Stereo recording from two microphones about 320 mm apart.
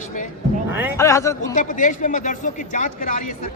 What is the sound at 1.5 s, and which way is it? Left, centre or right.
Speech, left.